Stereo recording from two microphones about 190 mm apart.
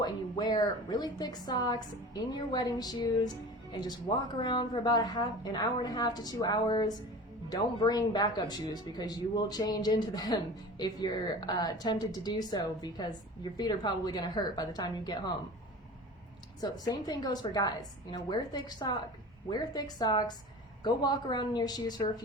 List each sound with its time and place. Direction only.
0.0 s speech: 20° left (ahead or behind)
16.6 s speech: 20° left (ahead or behind)